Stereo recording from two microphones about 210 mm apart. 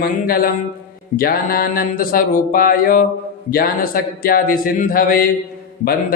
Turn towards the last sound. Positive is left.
turn(degrees=45)  # may be behind; listen again after turning